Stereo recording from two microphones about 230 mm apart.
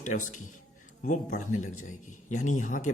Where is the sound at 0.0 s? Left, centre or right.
Left.